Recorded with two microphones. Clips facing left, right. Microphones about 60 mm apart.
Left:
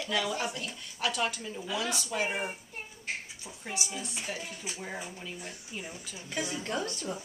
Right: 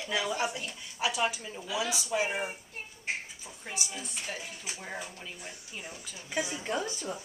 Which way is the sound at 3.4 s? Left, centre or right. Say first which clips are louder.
Left 4 dB; centre.